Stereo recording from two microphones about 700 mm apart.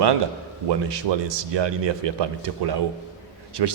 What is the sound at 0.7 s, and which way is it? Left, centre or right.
Speech, right.